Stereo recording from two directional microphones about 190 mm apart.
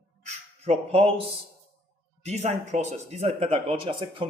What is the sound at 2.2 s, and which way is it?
Speech, 35° right (ahead or behind).